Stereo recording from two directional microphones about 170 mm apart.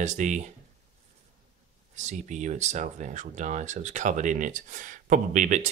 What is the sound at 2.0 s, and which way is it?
Speech, 45° right (ahead or behind).